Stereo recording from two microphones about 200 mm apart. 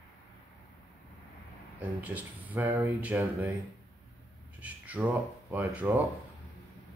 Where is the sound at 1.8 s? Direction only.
10° right (ahead or behind).